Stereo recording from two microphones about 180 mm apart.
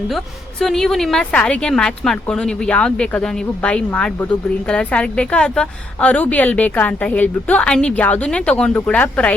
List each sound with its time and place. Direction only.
0.6 s a woman's voice: centre (ahead or behind)